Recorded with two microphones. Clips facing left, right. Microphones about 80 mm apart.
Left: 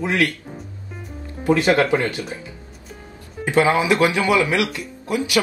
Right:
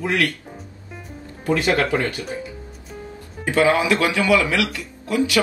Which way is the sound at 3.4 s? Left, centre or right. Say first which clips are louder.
Even; left.